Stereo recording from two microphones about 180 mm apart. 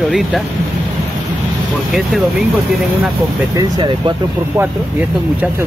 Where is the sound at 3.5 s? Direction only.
25° right (ahead or behind).